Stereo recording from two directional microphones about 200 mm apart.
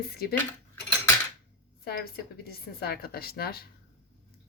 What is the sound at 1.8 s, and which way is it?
Speech, 50° left (ahead or behind).